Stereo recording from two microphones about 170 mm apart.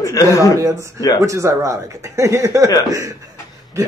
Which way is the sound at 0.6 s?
20° right (ahead or behind).